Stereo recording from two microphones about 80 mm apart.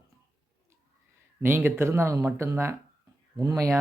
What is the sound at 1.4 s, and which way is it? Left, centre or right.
Speech, right.